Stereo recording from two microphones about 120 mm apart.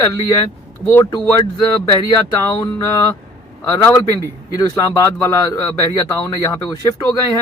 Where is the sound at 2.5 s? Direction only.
25° left (ahead or behind).